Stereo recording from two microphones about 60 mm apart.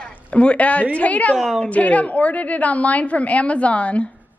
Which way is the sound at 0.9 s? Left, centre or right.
Left.